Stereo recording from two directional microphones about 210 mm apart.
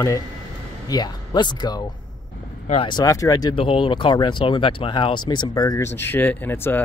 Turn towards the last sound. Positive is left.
turn(degrees=10)  # may be behind; listen again after turning